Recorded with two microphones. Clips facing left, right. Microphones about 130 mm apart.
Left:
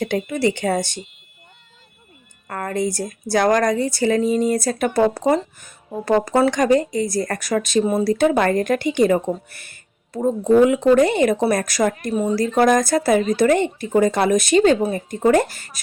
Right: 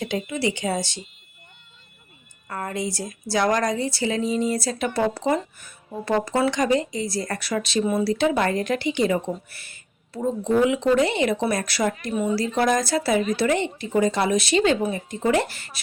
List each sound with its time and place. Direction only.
0.0 s speech: 55° left (ahead or behind)
2.5 s speech: 55° left (ahead or behind)